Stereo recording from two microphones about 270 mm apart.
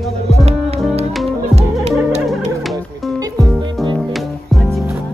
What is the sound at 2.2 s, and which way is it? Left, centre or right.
Music, centre.